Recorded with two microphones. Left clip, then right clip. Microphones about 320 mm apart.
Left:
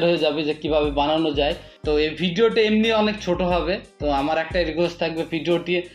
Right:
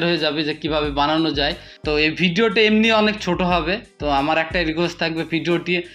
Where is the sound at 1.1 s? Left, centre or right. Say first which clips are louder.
Right 1 dB; right.